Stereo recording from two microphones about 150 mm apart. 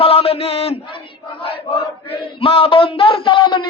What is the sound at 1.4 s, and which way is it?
Chant, 35° left (ahead or behind).